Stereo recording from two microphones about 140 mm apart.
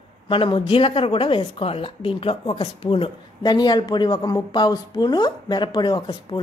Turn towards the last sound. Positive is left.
turn(degrees=30)  # may be behind; listen again after turning